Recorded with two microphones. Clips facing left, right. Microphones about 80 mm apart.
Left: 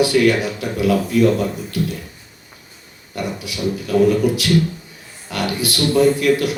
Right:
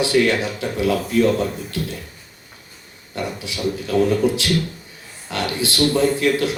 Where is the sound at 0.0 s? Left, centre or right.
Right.